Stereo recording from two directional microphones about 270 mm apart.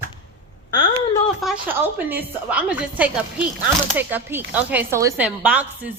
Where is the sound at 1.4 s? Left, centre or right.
Centre.